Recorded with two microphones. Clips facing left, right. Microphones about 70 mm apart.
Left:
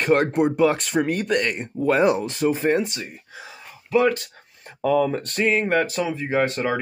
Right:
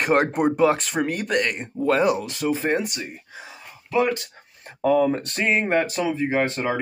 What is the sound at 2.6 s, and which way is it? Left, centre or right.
Speech, centre.